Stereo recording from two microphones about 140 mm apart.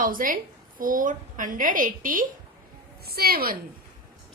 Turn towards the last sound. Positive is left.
turn(degrees=-90)